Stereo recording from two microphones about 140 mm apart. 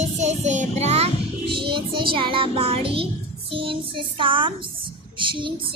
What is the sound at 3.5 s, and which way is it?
A child's voice, 40° right (ahead or behind).